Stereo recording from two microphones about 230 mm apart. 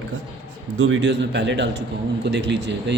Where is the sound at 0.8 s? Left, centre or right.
Right.